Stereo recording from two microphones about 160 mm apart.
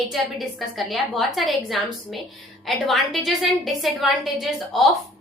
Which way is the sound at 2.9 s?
Centre (ahead or behind).